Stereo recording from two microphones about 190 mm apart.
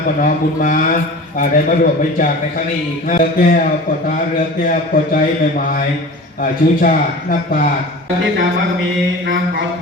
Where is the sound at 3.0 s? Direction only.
45° left (ahead or behind).